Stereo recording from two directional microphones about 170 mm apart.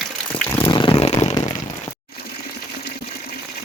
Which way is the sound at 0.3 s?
10° left (ahead or behind).